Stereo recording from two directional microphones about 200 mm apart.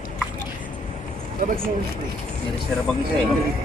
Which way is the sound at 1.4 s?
45° right (ahead or behind).